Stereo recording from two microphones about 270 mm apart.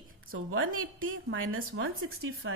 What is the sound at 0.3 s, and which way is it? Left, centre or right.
A woman's voice, right.